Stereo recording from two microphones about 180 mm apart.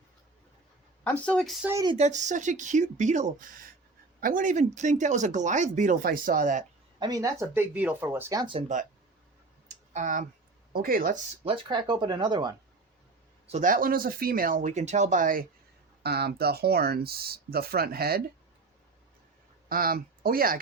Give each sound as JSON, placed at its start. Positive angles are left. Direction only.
{"t": 1.0, "sound": "speech", "side_deg": 5}
{"t": 2.0, "sound": "speech", "side_deg": -40}
{"t": 7.0, "sound": "speech", "side_deg": -20}
{"t": 9.6, "sound": "clicking", "side_deg": -45}
{"t": 10.7, "sound": "speech", "side_deg": -55}
{"t": 11.4, "sound": "speech", "side_deg": -25}
{"t": 13.5, "sound": "speech", "side_deg": -45}
{"t": 16.0, "sound": "speech", "side_deg": -60}
{"t": 19.6, "sound": "speech", "side_deg": -55}